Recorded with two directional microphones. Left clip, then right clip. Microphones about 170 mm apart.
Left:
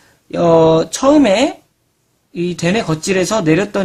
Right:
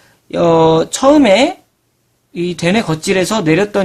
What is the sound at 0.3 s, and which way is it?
Speech, 15° right (ahead or behind).